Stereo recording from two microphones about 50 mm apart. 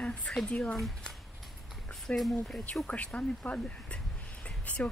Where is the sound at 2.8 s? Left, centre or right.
Left.